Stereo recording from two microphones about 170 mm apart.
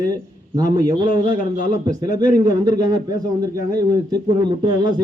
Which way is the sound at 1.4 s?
55° left (ahead or behind).